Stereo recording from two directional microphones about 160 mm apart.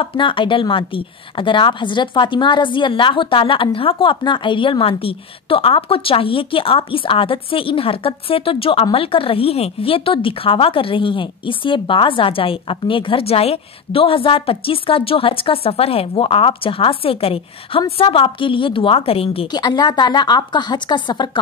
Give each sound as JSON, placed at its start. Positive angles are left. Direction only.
{"t": 0.0, "sound": "speech", "side_deg": 35}